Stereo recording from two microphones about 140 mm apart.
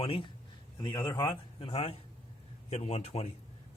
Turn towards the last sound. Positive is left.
turn(degrees=50)  # may be behind; listen again after turning